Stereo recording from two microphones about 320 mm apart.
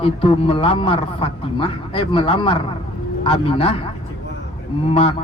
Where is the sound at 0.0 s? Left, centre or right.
Centre.